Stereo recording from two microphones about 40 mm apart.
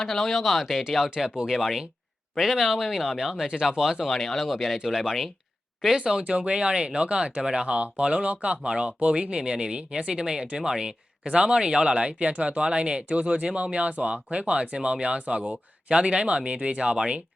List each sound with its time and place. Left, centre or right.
0.0 s speech: centre
4.0 s speech: centre
6.0 s speech: right
14.8 s speech: right